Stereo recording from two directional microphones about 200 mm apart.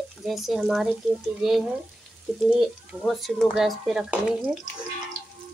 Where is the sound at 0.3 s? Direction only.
Centre (ahead or behind).